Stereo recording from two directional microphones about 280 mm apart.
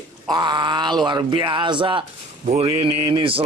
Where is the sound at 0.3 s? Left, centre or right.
Centre.